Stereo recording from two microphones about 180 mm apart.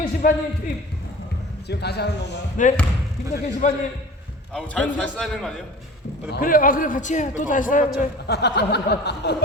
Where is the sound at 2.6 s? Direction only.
45° left (ahead or behind).